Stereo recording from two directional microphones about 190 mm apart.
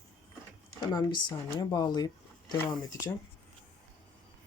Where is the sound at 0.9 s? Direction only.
20° left (ahead or behind).